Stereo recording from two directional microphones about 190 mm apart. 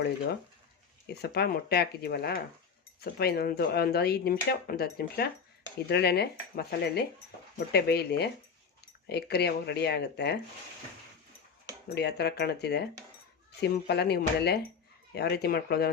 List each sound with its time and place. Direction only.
1.2 s speech: 55° left (ahead or behind)
11.9 s speech: 60° left (ahead or behind)